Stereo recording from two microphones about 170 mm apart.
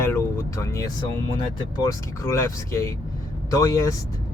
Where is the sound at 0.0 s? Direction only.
15° left (ahead or behind).